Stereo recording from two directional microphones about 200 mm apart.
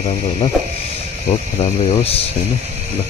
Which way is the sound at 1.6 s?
30° left (ahead or behind).